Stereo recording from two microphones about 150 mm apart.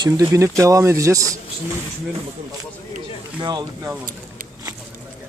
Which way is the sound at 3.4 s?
30° right (ahead or behind).